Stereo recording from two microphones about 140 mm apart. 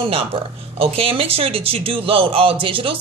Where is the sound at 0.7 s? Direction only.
40° right (ahead or behind).